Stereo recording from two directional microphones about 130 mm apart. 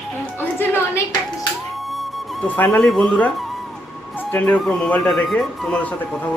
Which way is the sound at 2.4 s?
15° left (ahead or behind).